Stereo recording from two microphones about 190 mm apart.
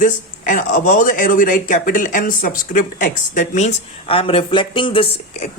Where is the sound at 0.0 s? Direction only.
45° left (ahead or behind).